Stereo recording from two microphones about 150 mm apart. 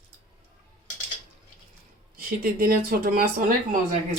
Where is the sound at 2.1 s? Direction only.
85° right.